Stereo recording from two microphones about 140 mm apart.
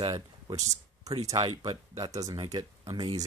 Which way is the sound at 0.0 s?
30° right (ahead or behind).